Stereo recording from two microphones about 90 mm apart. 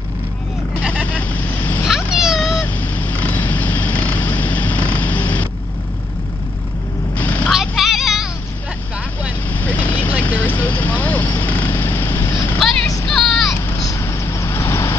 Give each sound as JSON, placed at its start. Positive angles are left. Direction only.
{"t": 1.1, "sound": "vehicle", "side_deg": 20}
{"t": 1.9, "sound": "cat", "side_deg": -5}
{"t": 2.6, "sound": "a sound", "side_deg": 20}
{"t": 7.2, "sound": "vehicle", "side_deg": 20}
{"t": 7.4, "sound": "vehicle", "side_deg": 0}
{"t": 9.5, "sound": "vehicle", "side_deg": 20}
{"t": 12.5, "sound": "vehicle", "side_deg": 5}
{"t": 13.8, "sound": "vehicle", "side_deg": 30}